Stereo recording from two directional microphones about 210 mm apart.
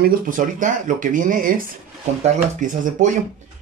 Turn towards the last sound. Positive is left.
turn(degrees=-40)  # may be behind; listen again after turning